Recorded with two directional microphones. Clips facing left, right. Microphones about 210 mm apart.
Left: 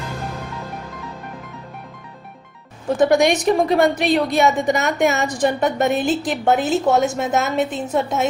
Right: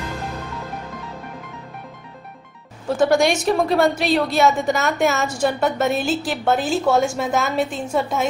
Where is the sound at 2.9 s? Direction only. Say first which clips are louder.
Left 2 dB; 20° left (ahead or behind).